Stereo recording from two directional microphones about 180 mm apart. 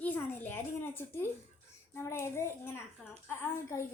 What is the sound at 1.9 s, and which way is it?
A woman's voice, 15° left (ahead or behind).